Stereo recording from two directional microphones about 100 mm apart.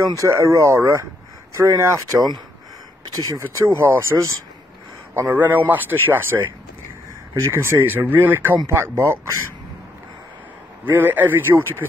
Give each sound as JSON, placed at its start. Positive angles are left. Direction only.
{"t": 0.1, "sound": "speech", "side_deg": -30}
{"t": 3.5, "sound": "speech", "side_deg": -25}
{"t": 10.9, "sound": "speech", "side_deg": -20}